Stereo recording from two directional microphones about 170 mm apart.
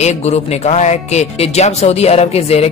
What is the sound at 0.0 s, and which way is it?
Speech, 40° left (ahead or behind).